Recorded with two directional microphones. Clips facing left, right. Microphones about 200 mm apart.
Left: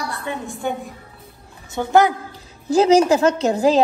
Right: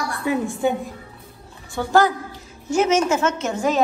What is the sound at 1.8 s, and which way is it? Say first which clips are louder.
Speech: left 2 dB; 20° left (ahead or behind).